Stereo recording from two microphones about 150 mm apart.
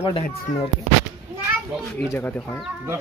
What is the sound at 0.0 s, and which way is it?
Speech, 40° left (ahead or behind).